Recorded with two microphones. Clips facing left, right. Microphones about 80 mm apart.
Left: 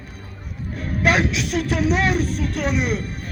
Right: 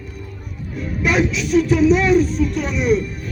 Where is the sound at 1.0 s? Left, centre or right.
Left.